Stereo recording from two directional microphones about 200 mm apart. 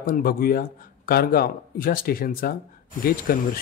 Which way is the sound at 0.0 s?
45° left (ahead or behind).